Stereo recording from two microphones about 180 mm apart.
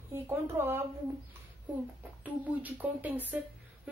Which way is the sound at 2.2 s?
10° right (ahead or behind).